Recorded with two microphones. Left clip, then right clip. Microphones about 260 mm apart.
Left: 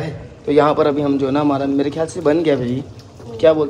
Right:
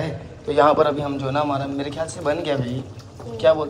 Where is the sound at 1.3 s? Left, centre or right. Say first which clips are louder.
Left 5 dB; left.